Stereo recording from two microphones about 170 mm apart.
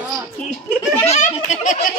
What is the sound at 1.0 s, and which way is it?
Speech, 45° left (ahead or behind).